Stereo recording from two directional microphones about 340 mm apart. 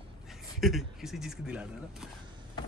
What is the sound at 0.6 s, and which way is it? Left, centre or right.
A man's voice, centre.